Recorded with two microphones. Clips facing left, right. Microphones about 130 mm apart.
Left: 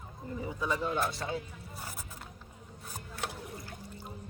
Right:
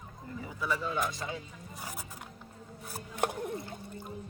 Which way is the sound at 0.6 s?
20° left (ahead or behind).